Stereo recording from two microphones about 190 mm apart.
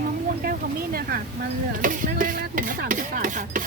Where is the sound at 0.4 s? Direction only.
50° right (ahead or behind).